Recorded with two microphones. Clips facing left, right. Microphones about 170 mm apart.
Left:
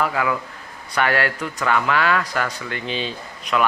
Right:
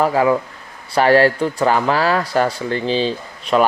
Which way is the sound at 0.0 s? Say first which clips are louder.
Right 7 dB; 30° right (ahead or behind).